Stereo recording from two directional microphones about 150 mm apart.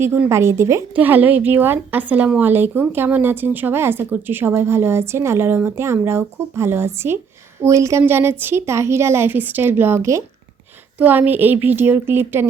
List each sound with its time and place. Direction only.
0.0 s speech: 15° right (ahead or behind)